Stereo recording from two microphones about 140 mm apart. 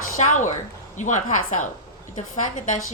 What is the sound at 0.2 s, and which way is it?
A woman's voice, 60° left (ahead or behind).